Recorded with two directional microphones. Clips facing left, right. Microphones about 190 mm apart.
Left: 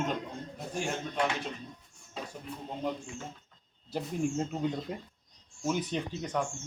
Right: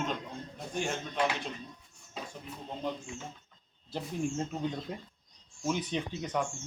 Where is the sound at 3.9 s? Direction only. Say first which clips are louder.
Left 2 dB; 5° left (ahead or behind).